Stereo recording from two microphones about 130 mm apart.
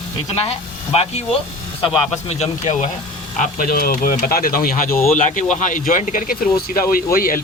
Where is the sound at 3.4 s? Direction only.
90° left.